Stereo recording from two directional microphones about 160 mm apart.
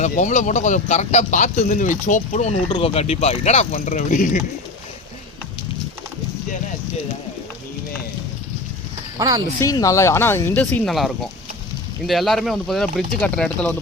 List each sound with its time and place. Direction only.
0.0 s speech: 50° left (ahead or behind)
9.1 s speech: 25° right (ahead or behind)
9.6 s speech: 20° left (ahead or behind)
10.9 s speech: centre (ahead or behind)